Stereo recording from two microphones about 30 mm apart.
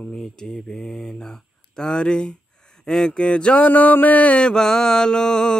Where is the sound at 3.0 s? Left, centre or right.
Left.